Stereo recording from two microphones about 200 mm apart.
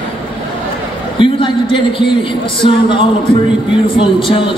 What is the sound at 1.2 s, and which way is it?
A man's voice, 25° left (ahead or behind).